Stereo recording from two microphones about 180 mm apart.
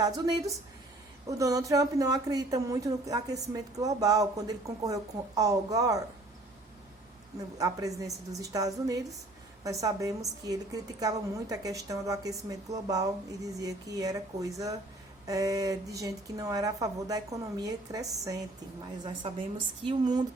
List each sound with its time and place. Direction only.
0.0 s a woman's voice: 20° right (ahead or behind)
7.3 s a woman's voice: 20° right (ahead or behind)